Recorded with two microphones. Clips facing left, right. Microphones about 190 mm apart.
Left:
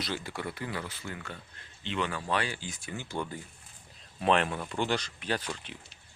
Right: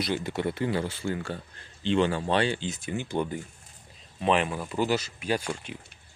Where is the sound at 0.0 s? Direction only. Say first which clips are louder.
Right 7 dB; 20° right (ahead or behind).